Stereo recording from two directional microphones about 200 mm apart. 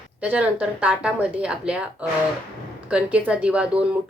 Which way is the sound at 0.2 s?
5° right (ahead or behind).